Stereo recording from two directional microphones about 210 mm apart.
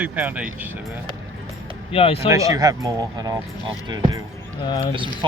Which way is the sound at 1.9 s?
25° left (ahead or behind).